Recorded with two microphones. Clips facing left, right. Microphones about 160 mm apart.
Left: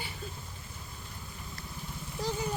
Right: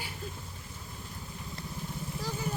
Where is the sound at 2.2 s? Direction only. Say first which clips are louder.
Left 5 dB; 20° left (ahead or behind).